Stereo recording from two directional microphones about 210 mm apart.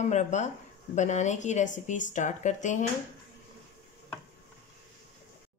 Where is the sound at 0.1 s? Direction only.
35° left (ahead or behind).